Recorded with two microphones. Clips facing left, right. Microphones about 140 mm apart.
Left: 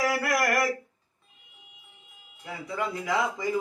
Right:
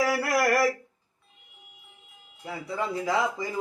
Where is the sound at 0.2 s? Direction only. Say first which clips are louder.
Right 2 dB; 30° right (ahead or behind).